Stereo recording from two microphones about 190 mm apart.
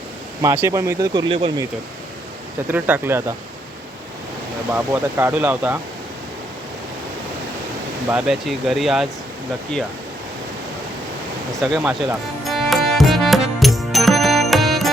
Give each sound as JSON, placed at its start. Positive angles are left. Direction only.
{"t": 0.4, "sound": "speech", "side_deg": -15}
{"t": 2.6, "sound": "speech", "side_deg": -10}
{"t": 4.7, "sound": "speech", "side_deg": -15}
{"t": 8.1, "sound": "speech", "side_deg": 0}
{"t": 11.6, "sound": "music", "side_deg": -5}